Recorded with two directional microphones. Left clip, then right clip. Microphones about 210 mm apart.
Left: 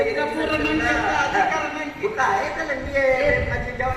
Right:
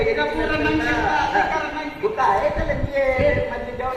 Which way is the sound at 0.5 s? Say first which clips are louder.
Left 2 dB; 40° left (ahead or behind).